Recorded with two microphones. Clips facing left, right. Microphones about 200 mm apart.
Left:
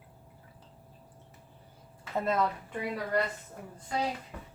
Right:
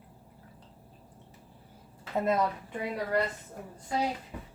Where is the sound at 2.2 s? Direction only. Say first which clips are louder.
Right 1 dB; 15° right (ahead or behind).